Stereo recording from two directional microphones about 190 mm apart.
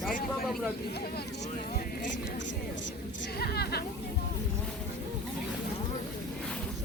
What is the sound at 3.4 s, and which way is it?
Speech, 55° left (ahead or behind).